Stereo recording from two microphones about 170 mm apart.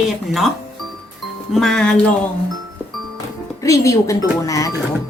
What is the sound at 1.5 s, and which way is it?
Speech, centre (ahead or behind).